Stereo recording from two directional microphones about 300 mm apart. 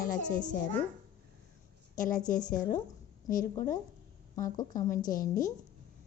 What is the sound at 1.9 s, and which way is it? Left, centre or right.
Speech, left.